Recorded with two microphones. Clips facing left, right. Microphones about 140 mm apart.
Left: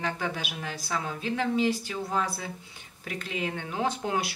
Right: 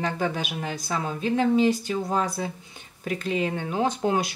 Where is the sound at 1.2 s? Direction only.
40° right (ahead or behind).